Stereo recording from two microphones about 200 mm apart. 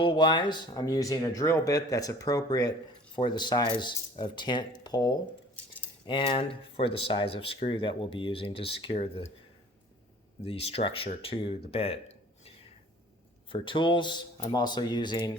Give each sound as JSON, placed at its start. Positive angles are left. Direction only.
{"t": 0.0, "sound": "speech", "side_deg": 20}
{"t": 10.4, "sound": "speech", "side_deg": 30}
{"t": 13.5, "sound": "speech", "side_deg": 25}